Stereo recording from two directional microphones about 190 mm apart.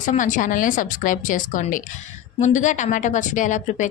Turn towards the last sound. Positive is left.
turn(degrees=40)  # may be behind; listen again after turning